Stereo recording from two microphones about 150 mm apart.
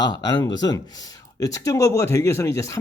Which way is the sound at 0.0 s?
25° left (ahead or behind).